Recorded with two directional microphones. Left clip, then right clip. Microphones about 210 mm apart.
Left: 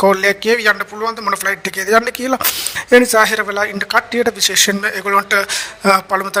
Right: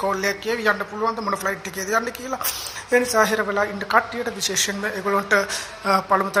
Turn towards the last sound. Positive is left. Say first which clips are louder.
# left 5 dB
turn(degrees=50)  # may be behind; listen again after turning